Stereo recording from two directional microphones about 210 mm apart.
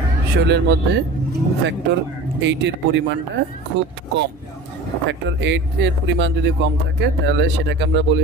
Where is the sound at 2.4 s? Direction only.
60° right (ahead or behind).